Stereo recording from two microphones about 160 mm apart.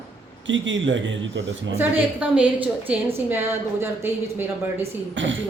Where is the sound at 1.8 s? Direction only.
10° right (ahead or behind).